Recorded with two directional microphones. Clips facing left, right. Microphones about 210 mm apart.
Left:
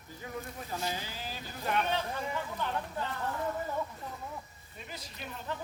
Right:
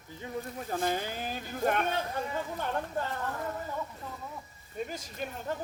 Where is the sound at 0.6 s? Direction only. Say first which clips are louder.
Right 8 dB; 50° right (ahead or behind).